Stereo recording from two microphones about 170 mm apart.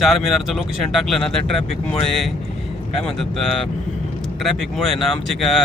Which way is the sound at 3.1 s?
Centre (ahead or behind).